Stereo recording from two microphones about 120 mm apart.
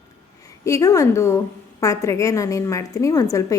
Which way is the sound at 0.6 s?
25° left (ahead or behind).